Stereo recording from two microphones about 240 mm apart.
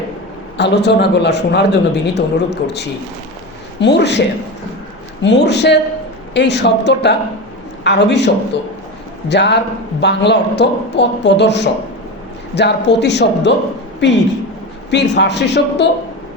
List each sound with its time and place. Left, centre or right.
0.5 s a man's voice: left
5.2 s a man's voice: left
9.3 s a man's voice: left